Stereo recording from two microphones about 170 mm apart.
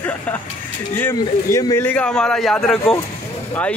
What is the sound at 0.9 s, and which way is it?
Speech, 15° left (ahead or behind).